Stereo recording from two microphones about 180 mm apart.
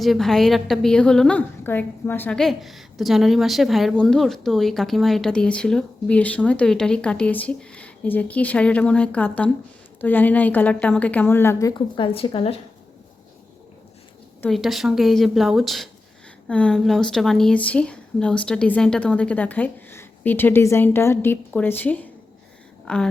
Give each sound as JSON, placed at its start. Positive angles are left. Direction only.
{"t": 0.0, "sound": "a woman's voice", "side_deg": 0}
{"t": 11.7, "sound": "a woman's voice", "side_deg": 30}
{"t": 14.5, "sound": "a woman's voice", "side_deg": 0}